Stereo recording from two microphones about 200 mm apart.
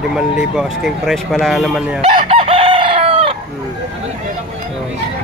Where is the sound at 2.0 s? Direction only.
30° right (ahead or behind).